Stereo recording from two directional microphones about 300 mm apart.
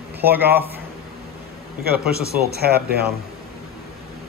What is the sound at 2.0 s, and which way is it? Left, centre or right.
Speech, right.